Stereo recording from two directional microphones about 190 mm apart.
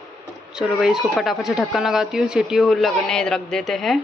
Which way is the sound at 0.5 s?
Centre (ahead or behind).